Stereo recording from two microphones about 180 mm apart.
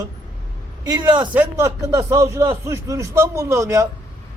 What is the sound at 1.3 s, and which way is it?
A man's voice, 10° right (ahead or behind).